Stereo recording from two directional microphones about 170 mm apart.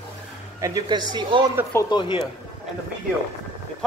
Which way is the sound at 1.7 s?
25° left (ahead or behind).